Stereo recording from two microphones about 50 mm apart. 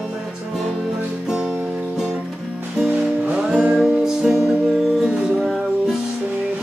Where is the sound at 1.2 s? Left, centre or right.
Centre.